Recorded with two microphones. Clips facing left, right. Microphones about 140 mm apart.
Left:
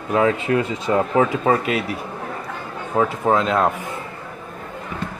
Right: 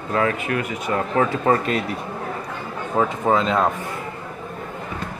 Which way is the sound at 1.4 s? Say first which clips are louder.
Even; 5° left (ahead or behind).